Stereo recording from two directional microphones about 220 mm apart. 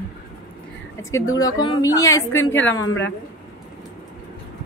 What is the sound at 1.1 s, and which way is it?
Speech, 15° left (ahead or behind).